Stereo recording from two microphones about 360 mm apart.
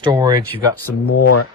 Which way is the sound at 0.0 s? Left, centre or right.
Centre.